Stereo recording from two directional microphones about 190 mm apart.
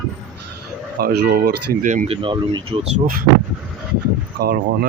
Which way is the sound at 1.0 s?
55° right (ahead or behind).